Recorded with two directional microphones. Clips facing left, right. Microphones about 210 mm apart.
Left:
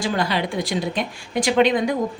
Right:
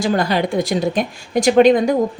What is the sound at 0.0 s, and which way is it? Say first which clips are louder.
A woman's voice: right 5 dB; 45° right (ahead or behind).